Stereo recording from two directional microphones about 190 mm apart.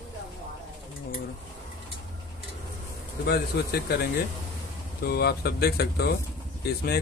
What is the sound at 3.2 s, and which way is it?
Speech, 60° left (ahead or behind).